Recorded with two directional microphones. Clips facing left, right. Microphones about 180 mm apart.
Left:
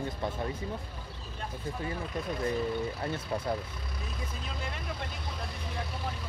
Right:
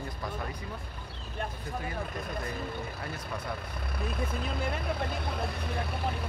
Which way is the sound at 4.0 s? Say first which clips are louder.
Right 8 dB; 60° right (ahead or behind).